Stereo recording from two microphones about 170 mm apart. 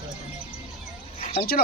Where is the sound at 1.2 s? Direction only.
45° left (ahead or behind).